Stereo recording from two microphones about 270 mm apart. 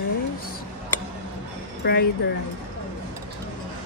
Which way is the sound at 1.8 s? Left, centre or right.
Left.